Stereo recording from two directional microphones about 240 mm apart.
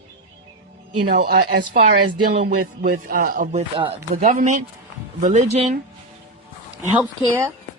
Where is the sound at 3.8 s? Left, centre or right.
Right.